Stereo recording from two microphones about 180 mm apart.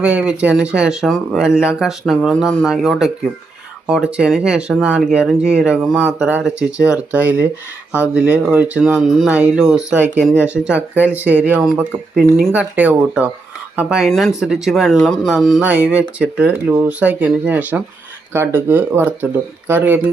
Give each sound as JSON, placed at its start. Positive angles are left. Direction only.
{"t": 0.0, "sound": "speech", "side_deg": -5}